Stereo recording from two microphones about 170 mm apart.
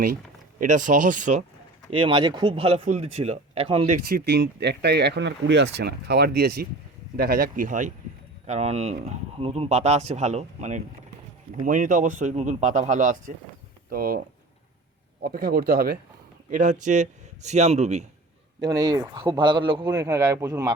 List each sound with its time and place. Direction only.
0.6 s speech: 50° right (ahead or behind)
1.9 s speech: 30° right (ahead or behind)
3.9 s speech: 70° right (ahead or behind)
16.5 s speech: 50° right (ahead or behind)
18.6 s speech: 20° right (ahead or behind)